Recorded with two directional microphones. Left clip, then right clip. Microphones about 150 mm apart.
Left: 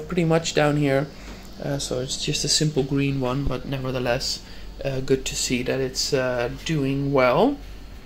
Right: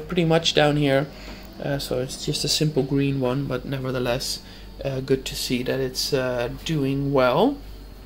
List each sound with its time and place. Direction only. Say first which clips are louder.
0.1 s speech: right 2 dB; 10° right (ahead or behind)
2.3 s speech: left 1 dB; 40° left (ahead or behind)
2.6 s speech: right 1 dB; 10° right (ahead or behind)